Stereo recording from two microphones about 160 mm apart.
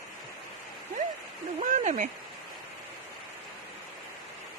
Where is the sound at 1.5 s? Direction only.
45° right (ahead or behind).